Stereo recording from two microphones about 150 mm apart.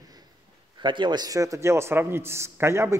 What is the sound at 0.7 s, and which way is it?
A man's voice, 30° right (ahead or behind).